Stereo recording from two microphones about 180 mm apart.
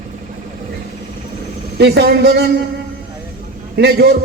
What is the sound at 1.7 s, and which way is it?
Speech, 65° right (ahead or behind).